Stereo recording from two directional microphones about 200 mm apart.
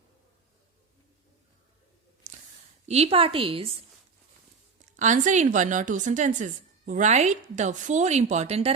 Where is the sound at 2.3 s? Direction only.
40° right (ahead or behind).